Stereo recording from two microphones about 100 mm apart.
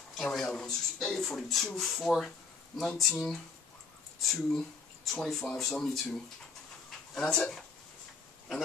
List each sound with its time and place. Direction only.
0.2 s speech: 5° left (ahead or behind)
4.2 s speech: centre (ahead or behind)